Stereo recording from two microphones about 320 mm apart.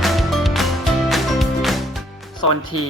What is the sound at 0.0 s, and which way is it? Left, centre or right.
Music, centre.